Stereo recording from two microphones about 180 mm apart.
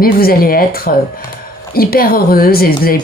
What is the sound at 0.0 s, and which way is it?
Speech, 55° left (ahead or behind).